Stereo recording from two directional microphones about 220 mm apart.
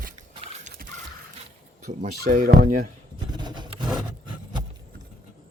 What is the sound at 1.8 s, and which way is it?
Speech, 35° right (ahead or behind).